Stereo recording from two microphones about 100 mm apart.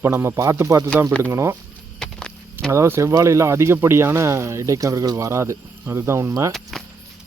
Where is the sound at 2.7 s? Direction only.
25° right (ahead or behind).